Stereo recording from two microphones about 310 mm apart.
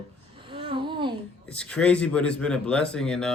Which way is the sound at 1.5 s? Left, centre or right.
Centre.